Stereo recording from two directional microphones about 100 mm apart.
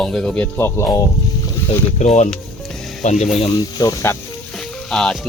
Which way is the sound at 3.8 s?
35° left (ahead or behind).